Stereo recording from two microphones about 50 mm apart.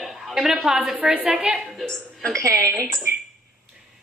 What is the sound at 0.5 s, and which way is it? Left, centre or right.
Speech, centre.